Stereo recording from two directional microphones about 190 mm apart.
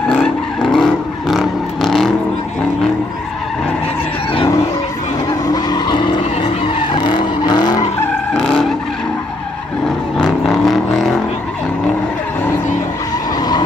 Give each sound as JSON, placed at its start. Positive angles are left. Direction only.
{"t": 0.1, "sound": "vehicle", "side_deg": 0}
{"t": 5.5, "sound": "vehicle", "side_deg": 20}
{"t": 8.4, "sound": "vehicle", "side_deg": 5}
{"t": 10.1, "sound": "vehicle", "side_deg": 5}